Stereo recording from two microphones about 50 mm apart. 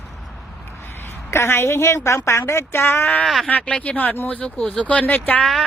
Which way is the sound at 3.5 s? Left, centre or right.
Left.